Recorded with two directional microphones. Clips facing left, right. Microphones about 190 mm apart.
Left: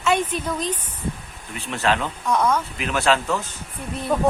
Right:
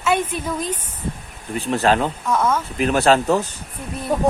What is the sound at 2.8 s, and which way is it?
Speech, 40° right (ahead or behind).